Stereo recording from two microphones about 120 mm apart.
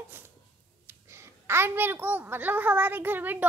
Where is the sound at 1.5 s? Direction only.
20° right (ahead or behind).